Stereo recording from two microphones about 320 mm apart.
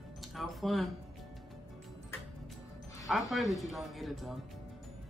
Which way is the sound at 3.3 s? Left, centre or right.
Centre.